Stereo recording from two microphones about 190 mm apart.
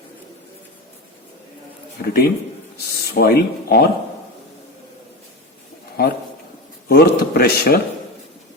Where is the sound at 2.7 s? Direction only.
55° left (ahead or behind).